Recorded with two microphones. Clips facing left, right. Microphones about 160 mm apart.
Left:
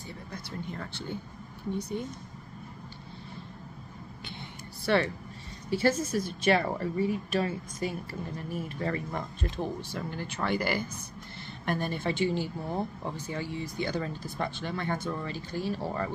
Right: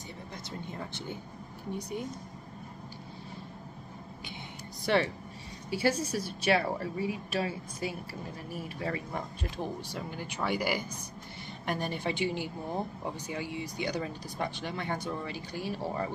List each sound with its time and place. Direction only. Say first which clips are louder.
0.3 s speech: left 3 dB; 20° right (ahead or behind)
4.8 s speech: left 1 dB; 15° right (ahead or behind)